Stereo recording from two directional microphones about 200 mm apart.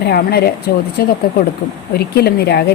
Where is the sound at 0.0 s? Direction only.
50° left (ahead or behind).